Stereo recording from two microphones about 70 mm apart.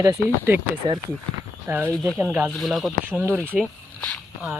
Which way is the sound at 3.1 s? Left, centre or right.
Right.